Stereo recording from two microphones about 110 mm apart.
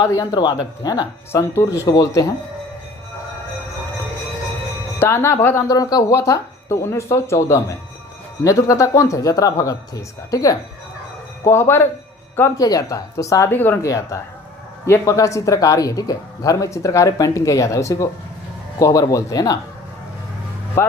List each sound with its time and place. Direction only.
0.0 s speech: 30° left (ahead or behind)
1.3 s speech: 25° left (ahead or behind)
4.9 s speech: 25° left (ahead or behind)
5.6 s speech: 35° left (ahead or behind)
12.5 s speech: 35° left (ahead or behind)
13.8 s speech: 30° left (ahead or behind)
20.8 s speech: 25° left (ahead or behind)